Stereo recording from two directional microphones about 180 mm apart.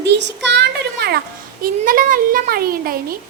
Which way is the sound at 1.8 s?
50° right (ahead or behind).